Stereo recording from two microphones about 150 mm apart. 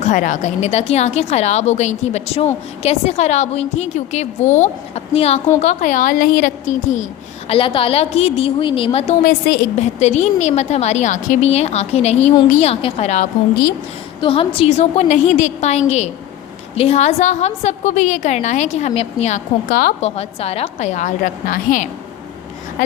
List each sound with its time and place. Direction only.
0.0 s a woman's voice: 55° left (ahead or behind)
5.6 s a woman's voice: 60° left (ahead or behind)
7.4 s a woman's voice: 35° left (ahead or behind)
9.2 s a woman's voice: 70° left (ahead or behind)
10.0 s a woman's voice: 50° left (ahead or behind)
14.2 s a woman's voice: 35° left (ahead or behind); by 21.8 s 65° left (ahead or behind)